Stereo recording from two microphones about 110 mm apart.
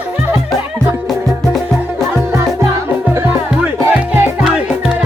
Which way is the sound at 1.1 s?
Centre (ahead or behind).